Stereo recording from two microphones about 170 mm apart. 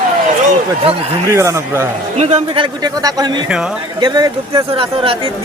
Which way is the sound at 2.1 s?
40° right (ahead or behind).